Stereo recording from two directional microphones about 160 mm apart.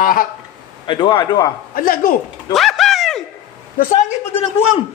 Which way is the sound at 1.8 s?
60° left (ahead or behind).